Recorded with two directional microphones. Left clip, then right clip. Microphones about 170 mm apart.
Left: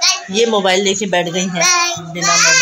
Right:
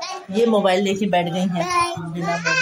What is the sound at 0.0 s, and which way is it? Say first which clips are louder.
A child's voice: left 7 dB; 25° left (ahead or behind).